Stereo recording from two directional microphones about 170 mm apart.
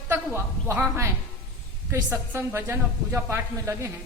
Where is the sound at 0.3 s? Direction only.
15° right (ahead or behind).